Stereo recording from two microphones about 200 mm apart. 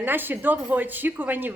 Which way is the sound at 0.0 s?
10° right (ahead or behind).